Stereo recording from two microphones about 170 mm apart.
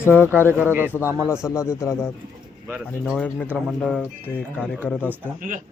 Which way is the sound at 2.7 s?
5° right (ahead or behind).